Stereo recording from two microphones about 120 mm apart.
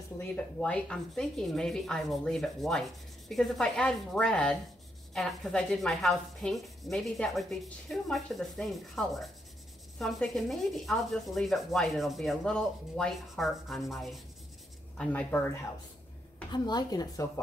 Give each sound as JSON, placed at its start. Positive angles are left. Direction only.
{"t": 0.6, "sound": "rub", "side_deg": 5}
{"t": 15.0, "sound": "speech", "side_deg": 15}
{"t": 16.5, "sound": "speech", "side_deg": 35}